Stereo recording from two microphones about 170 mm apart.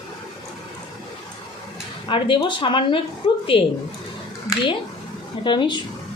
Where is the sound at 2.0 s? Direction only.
30° left (ahead or behind).